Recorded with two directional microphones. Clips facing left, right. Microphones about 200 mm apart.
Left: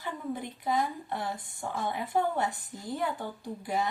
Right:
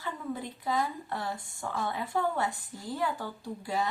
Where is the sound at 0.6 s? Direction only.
20° left (ahead or behind).